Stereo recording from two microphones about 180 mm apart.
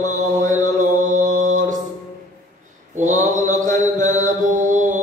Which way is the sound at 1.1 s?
45° right (ahead or behind).